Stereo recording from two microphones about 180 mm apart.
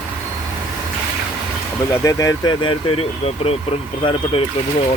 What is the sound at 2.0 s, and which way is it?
Speech, 20° left (ahead or behind).